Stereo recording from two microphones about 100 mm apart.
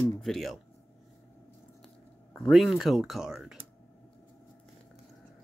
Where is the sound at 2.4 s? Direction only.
Centre (ahead or behind).